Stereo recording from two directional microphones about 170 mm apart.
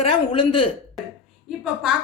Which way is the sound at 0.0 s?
30° left (ahead or behind).